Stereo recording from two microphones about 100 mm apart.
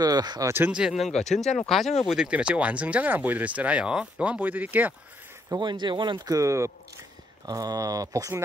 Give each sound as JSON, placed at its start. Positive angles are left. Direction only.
{"t": 0.0, "sound": "speech", "side_deg": -40}
{"t": 0.7, "sound": "speech", "side_deg": -10}
{"t": 2.0, "sound": "speech", "side_deg": -10}
{"t": 5.6, "sound": "speech", "side_deg": -50}
{"t": 6.3, "sound": "speech", "side_deg": -30}